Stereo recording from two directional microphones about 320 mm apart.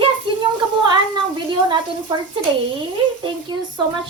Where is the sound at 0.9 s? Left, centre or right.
Centre.